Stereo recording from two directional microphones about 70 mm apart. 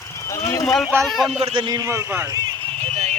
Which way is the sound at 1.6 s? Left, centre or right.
Right.